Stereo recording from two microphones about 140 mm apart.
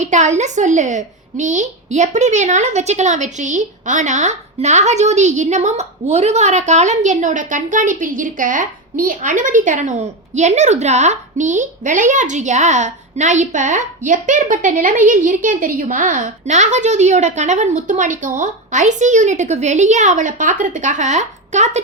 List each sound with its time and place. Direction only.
0.0 s a woman's voice: 60° right (ahead or behind)